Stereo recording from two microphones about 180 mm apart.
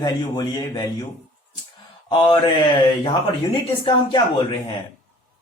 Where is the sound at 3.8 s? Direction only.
25° left (ahead or behind).